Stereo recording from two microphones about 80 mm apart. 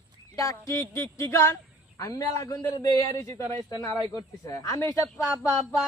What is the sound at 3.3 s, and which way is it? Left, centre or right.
Speech, left.